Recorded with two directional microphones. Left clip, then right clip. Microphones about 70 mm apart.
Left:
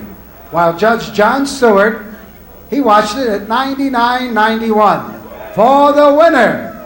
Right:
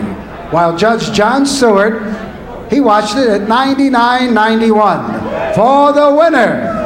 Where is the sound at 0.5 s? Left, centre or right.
Left.